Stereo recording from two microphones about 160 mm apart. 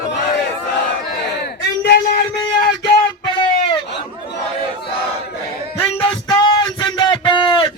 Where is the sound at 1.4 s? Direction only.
85° left.